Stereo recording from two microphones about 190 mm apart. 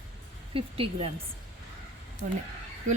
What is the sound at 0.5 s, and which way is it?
Speech, 30° right (ahead or behind).